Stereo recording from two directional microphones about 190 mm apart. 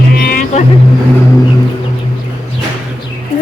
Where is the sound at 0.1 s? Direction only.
50° left (ahead or behind).